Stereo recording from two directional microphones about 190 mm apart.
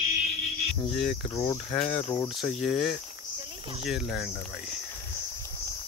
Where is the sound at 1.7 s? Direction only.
30° left (ahead or behind).